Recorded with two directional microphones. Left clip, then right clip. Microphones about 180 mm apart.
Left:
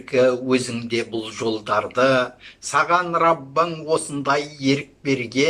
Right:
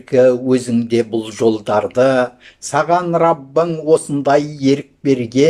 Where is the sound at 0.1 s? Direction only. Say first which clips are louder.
Right 6 dB; 40° right (ahead or behind).